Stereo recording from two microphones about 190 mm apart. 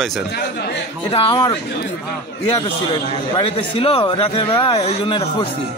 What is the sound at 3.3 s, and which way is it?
Speech, 25° left (ahead or behind).